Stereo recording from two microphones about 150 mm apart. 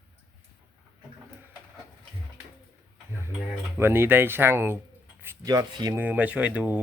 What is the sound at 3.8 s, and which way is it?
Speech, 15° right (ahead or behind).